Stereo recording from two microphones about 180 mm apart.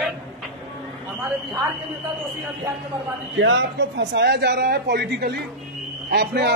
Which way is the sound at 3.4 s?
90° right.